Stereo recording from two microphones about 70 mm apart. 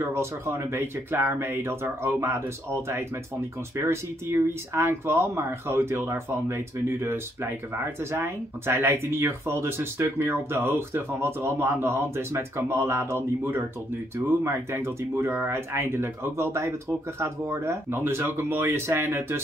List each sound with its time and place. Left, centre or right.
0.1 s speech: right
3.7 s speech: right